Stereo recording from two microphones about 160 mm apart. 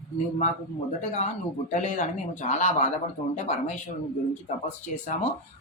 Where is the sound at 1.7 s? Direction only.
50° left (ahead or behind).